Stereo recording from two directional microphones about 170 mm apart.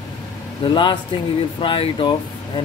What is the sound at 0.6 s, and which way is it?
Speech, 30° left (ahead or behind).